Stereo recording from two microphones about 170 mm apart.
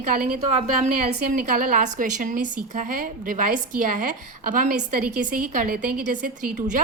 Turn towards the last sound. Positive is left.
turn(degrees=-50)  # may be behind; listen again after turning